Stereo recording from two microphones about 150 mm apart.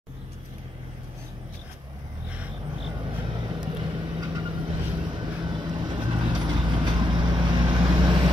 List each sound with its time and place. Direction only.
3.1 s vehicle: 35° right (ahead or behind)